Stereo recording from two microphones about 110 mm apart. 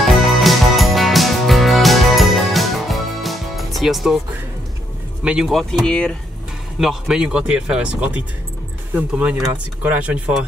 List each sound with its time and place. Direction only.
0.0 s music: centre (ahead or behind)
5.2 s speech: 5° right (ahead or behind)
6.8 s speech: 5° right (ahead or behind)